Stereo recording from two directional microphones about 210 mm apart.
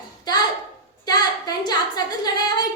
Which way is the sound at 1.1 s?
20° left (ahead or behind).